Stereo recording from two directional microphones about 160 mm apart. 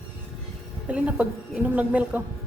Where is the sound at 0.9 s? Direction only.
5° right (ahead or behind).